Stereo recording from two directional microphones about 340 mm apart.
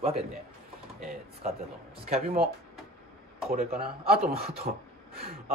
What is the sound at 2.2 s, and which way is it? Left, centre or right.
Speech, right.